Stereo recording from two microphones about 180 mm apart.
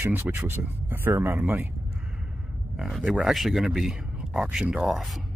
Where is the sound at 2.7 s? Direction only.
Centre (ahead or behind).